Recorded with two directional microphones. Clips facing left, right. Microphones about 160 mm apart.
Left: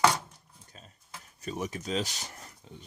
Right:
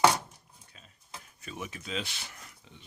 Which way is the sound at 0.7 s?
40° left (ahead or behind).